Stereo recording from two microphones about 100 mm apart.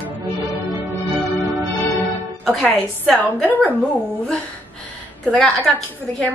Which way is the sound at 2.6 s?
10° left (ahead or behind).